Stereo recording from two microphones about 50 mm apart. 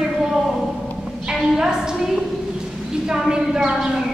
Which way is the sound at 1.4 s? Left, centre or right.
Centre.